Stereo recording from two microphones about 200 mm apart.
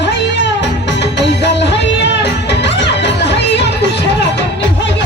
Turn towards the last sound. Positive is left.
turn(degrees=60)  # may be behind; listen again after turning